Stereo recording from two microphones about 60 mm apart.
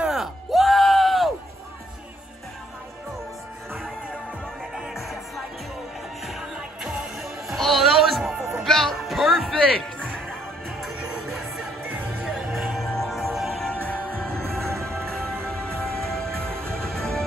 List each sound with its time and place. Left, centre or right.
0.0 s music: centre
4.7 s music: centre
11.0 s music: centre
14.4 s music: right
15.0 s music: centre